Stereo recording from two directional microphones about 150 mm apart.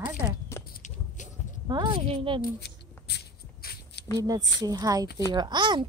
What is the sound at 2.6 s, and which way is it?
Shuffle, 90° left.